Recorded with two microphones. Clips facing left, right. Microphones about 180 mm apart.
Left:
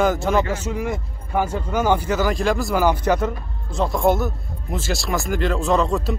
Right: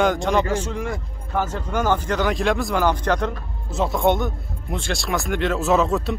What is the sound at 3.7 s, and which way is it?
Speech, centre (ahead or behind).